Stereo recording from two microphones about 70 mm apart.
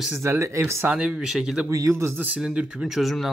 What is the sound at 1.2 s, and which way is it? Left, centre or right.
Speech, centre.